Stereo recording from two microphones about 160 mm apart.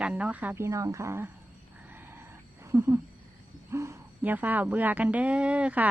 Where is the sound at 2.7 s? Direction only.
15° right (ahead or behind).